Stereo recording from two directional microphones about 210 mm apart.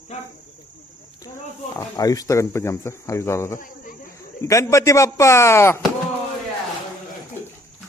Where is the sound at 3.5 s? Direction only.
40° left (ahead or behind).